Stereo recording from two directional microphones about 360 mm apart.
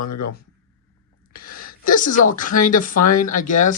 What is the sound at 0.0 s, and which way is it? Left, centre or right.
Speech, left.